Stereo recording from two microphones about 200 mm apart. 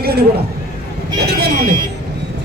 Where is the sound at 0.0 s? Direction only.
50° right (ahead or behind).